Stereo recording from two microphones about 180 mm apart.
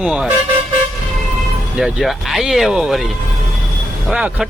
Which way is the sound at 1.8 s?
Centre (ahead or behind).